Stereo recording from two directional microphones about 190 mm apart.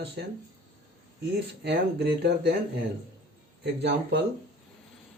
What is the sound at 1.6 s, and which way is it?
Speech, 60° right (ahead or behind).